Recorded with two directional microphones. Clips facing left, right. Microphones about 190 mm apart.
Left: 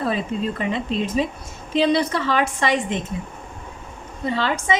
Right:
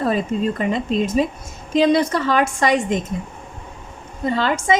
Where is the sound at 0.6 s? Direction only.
45° right (ahead or behind).